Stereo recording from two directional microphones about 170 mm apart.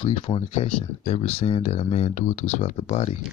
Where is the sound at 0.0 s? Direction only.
30° left (ahead or behind).